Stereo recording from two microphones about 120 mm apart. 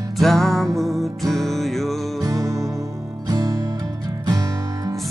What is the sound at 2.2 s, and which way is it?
Music, 25° right (ahead or behind).